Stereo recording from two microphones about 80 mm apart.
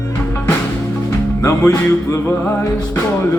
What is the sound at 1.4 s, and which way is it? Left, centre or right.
Music, left.